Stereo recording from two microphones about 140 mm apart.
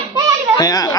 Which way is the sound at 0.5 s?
25° left (ahead or behind).